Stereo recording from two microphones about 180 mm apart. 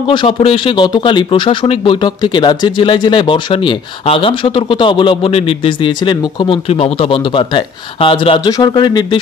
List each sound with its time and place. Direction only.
0.0 s speech: 30° left (ahead or behind)